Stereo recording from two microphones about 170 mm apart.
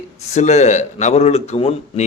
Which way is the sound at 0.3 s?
40° left (ahead or behind).